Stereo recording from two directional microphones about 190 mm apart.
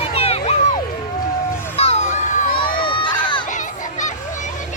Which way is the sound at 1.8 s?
35° left (ahead or behind).